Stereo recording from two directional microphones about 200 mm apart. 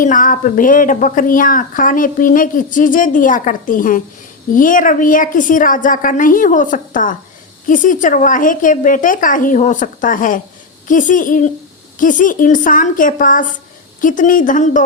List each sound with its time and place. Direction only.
0.0 s speech: 40° left (ahead or behind)